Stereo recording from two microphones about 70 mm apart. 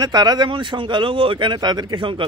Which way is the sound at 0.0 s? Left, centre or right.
Right.